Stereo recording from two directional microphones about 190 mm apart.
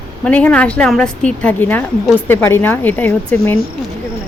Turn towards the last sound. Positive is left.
turn(degrees=10)  # may be behind; listen again after turning